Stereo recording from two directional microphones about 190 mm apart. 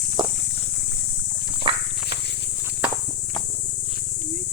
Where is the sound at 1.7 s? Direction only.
25° right (ahead or behind).